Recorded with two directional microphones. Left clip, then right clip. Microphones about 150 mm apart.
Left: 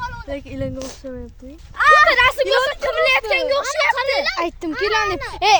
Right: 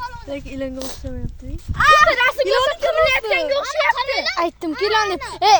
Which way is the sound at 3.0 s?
45° left (ahead or behind).